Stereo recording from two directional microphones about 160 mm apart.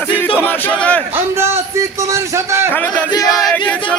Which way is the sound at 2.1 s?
15° right (ahead or behind).